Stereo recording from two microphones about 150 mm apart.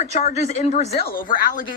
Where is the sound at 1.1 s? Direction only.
60° left (ahead or behind).